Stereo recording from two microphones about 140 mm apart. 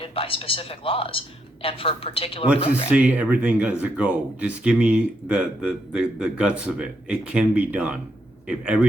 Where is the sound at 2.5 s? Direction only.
45° left (ahead or behind).